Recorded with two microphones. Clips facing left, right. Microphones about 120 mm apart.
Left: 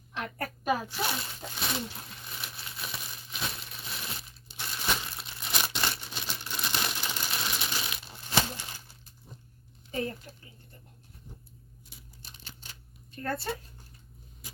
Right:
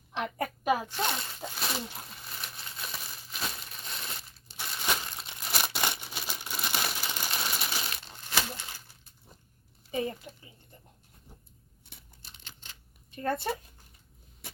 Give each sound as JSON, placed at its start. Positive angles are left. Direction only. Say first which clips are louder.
{"t": 0.3, "sound": "a woman's voice", "louder": "right 1 dB", "side_deg": -15}
{"t": 0.9, "sound": "speech", "louder": "right 1 dB", "side_deg": 5}
{"t": 1.9, "sound": "crumpling", "louder": "even", "side_deg": 0}
{"t": 5.6, "sound": "crumpling", "louder": "right 1 dB", "side_deg": -15}
{"t": 7.3, "sound": "a sound", "louder": "right 2 dB", "side_deg": -5}
{"t": 7.9, "sound": "a sound", "louder": "left 1 dB", "side_deg": 5}
{"t": 8.4, "sound": "crumpling", "louder": "left 3 dB", "side_deg": 15}
{"t": 9.9, "sound": "speech", "louder": "right 1 dB", "side_deg": -10}
{"t": 12.2, "sound": "scissors", "louder": "left 2 dB", "side_deg": 15}
{"t": 13.1, "sound": "speech", "louder": "right 3 dB", "side_deg": -20}